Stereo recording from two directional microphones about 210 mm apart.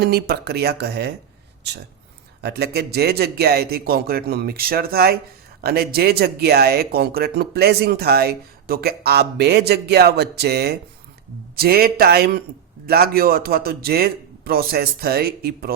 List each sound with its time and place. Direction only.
0.0 s speech: 50° right (ahead or behind)
2.4 s speech: 50° right (ahead or behind)